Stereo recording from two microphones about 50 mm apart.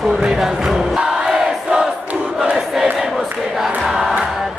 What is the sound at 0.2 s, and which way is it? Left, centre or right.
Crowd, centre.